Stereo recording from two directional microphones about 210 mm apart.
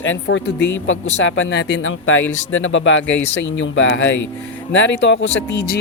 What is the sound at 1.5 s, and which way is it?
Speech, 55° left (ahead or behind).